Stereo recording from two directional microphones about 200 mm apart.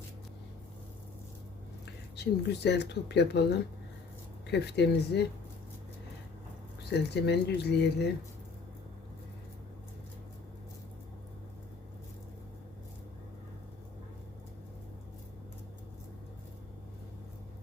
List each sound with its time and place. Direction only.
2.1 s speech: 55° left (ahead or behind)
4.5 s speech: 55° left (ahead or behind)
6.9 s speech: 55° left (ahead or behind)